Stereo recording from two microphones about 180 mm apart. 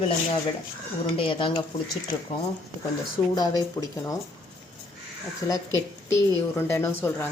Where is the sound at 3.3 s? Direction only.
20° left (ahead or behind).